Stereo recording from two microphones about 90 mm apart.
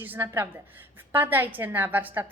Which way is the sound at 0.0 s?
25° right (ahead or behind).